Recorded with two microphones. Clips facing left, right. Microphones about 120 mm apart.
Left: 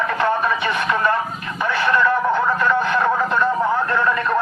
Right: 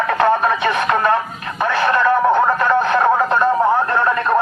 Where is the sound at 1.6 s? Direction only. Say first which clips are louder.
Right 2 dB; 55° right (ahead or behind); by 4.3 s 40° right (ahead or behind).